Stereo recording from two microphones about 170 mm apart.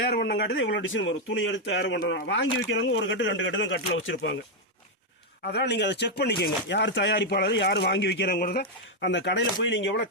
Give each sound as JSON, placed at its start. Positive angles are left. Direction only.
{"t": 0.0, "sound": "speech", "side_deg": 75}
{"t": 5.5, "sound": "speech", "side_deg": 85}
{"t": 8.4, "sound": "speech", "side_deg": 70}